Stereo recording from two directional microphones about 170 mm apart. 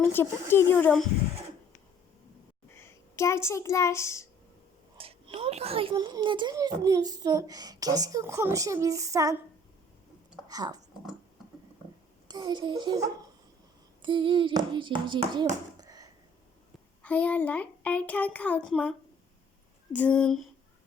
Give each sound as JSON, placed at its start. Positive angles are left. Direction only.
{"t": 0.0, "sound": "a child's voice", "side_deg": 15}
{"t": 2.7, "sound": "a child's voice", "side_deg": 15}
{"t": 4.9, "sound": "a child's voice", "side_deg": -35}
{"t": 10.5, "sound": "a woman's voice", "side_deg": -20}
{"t": 12.3, "sound": "a woman's voice", "side_deg": -25}
{"t": 15.8, "sound": "a sound", "side_deg": -20}
{"t": 17.0, "sound": "a child's voice", "side_deg": 10}